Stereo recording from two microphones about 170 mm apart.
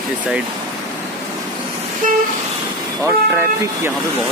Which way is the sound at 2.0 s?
50° right (ahead or behind).